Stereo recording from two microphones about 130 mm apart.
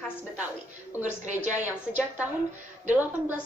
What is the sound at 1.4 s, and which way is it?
Speech, 65° right (ahead or behind).